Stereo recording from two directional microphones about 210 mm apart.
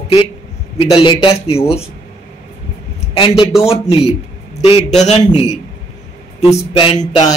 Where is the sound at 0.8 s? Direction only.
25° left (ahead or behind).